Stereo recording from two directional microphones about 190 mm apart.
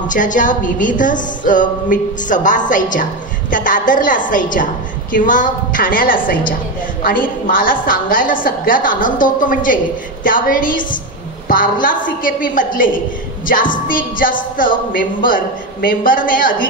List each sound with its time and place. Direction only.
0.1 s a woman's voice: 45° left (ahead or behind)